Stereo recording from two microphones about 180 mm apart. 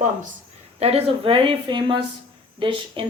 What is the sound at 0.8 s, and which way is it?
Speech, 35° right (ahead or behind).